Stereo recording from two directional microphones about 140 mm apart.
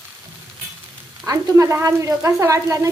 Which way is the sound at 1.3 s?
20° right (ahead or behind).